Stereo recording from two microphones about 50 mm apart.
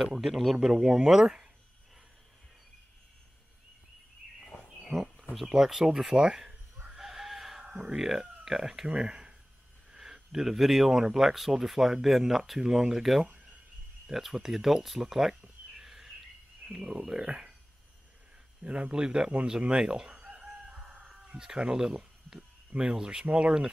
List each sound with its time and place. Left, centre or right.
0.0 s speech: centre
4.8 s a sound: centre
5.3 s speech: centre
6.9 s chicken: centre
7.7 s speech: centre
15.7 s a sound: centre
18.6 s speech: right
19.7 s chicken: centre
21.3 s speech: centre